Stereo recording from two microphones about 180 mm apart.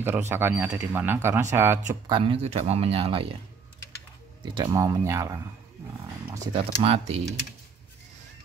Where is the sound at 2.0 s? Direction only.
30° right (ahead or behind).